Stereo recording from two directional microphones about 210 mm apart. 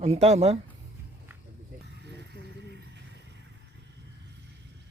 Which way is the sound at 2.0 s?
55° right (ahead or behind).